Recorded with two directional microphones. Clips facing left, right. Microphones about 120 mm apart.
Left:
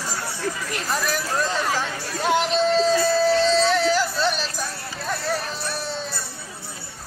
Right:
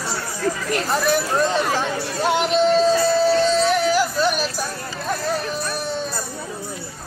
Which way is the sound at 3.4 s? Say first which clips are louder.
Right 1 dB; 15° right (ahead or behind).